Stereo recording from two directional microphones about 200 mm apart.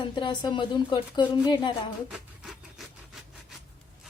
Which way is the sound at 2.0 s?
Centre (ahead or behind).